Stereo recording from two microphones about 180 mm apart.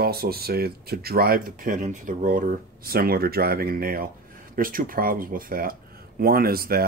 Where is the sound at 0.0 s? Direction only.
60° right (ahead or behind).